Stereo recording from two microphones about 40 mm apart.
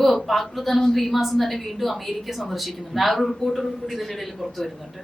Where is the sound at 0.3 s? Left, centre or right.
Centre.